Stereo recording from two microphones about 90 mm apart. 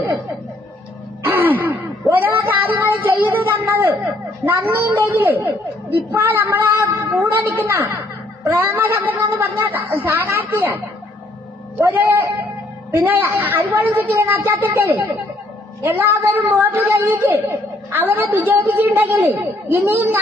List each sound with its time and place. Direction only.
1.2 s gasp: 25° right (ahead or behind)
4.4 s a woman's voice: 25° right (ahead or behind)
11.8 s a woman's voice: 25° right (ahead or behind)